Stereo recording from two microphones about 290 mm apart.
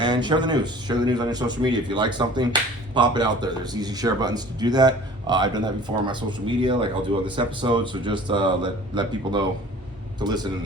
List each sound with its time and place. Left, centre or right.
0.0 s speech: centre